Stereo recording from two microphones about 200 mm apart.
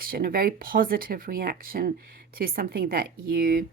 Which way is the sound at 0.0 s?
45° right (ahead or behind).